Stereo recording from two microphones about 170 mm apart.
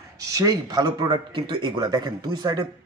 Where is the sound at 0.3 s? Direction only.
20° right (ahead or behind).